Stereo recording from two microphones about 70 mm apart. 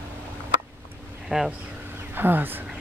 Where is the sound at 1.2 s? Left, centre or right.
Centre.